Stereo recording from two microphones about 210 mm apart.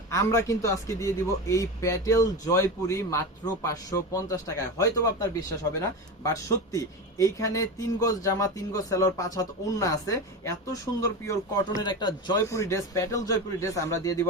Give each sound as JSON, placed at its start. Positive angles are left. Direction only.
{"t": 0.1, "sound": "a man's voice", "side_deg": 15}